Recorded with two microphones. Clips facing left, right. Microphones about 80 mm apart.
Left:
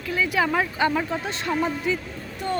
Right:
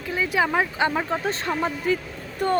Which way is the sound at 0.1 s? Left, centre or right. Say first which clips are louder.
Even; right.